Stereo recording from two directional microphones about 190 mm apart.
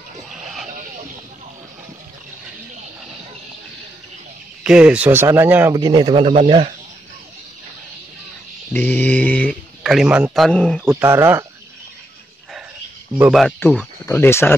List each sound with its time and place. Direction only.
0.3 s vehicle: centre (ahead or behind)
4.6 s speech: 5° right (ahead or behind); by 6.7 s 30° right (ahead or behind)
8.7 s speech: 10° left (ahead or behind)
9.8 s speech: 5° right (ahead or behind)
10.9 s speech: 10° right (ahead or behind)
13.3 s speech: centre (ahead or behind)